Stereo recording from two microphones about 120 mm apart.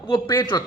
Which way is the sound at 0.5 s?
35° left (ahead or behind).